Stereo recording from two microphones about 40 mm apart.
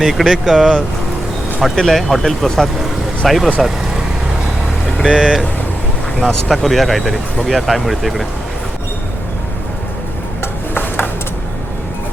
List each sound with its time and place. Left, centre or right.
0.0 s speech: centre
0.5 s speech: right
1.5 s speech: centre
5.1 s speech: right
6.1 s speech: centre
10.8 s a sound: left